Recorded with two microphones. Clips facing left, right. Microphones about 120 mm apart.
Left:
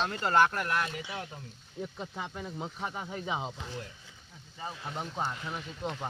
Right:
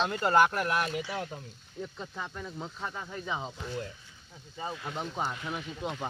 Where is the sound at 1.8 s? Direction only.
15° left (ahead or behind).